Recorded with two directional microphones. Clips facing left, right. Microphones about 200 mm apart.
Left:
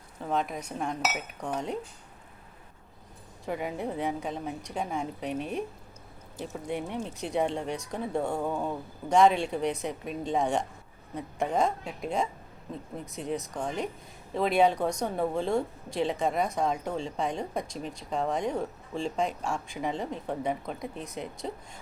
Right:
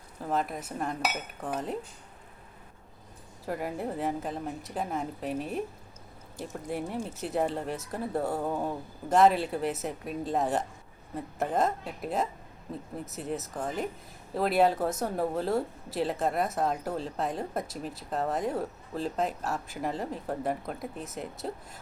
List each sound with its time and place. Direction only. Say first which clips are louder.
0.2 s speech: even; centre (ahead or behind)
3.4 s speech: left 1 dB; centre (ahead or behind)